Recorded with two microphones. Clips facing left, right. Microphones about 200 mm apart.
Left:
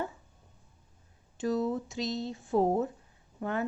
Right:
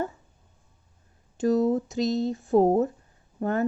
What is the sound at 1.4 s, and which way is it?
Speech, 45° right (ahead or behind).